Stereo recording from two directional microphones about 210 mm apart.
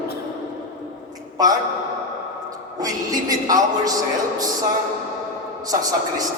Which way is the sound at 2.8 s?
15° right (ahead or behind).